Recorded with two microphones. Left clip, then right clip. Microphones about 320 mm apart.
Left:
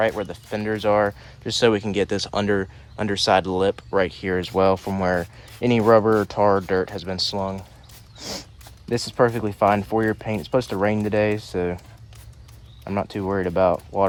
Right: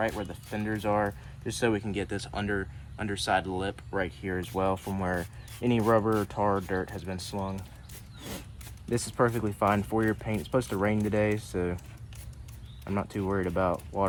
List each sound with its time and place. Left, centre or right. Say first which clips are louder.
0.0 s speech: left 9 dB; left
8.9 s speech: left 7 dB; left
12.8 s speech: left 7 dB; left